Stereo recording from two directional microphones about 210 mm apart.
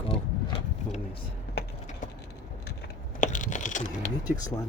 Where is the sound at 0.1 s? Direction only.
25° left (ahead or behind).